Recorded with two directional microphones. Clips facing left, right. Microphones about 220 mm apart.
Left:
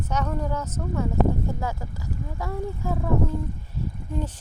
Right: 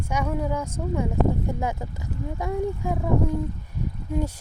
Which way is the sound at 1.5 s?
20° right (ahead or behind).